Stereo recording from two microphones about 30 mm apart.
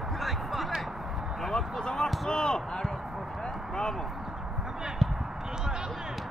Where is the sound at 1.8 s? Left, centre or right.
Left.